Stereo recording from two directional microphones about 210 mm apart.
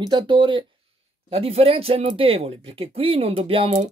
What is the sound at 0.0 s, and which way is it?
Speech, 20° right (ahead or behind).